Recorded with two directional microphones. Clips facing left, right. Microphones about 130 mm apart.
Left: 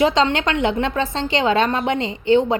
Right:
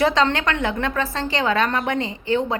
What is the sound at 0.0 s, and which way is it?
A woman's voice, 20° left (ahead or behind).